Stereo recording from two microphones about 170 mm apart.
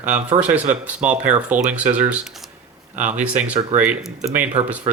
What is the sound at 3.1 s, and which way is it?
Speech, 10° right (ahead or behind).